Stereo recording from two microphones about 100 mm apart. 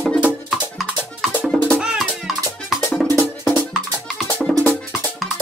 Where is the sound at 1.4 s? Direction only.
10° left (ahead or behind).